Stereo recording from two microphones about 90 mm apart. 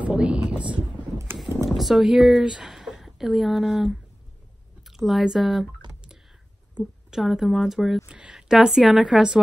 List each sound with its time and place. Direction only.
0.0 s speech: 10° right (ahead or behind)
1.1 s a sound: 25° right (ahead or behind)
1.7 s a woman's voice: centre (ahead or behind)
6.8 s a woman's voice: centre (ahead or behind)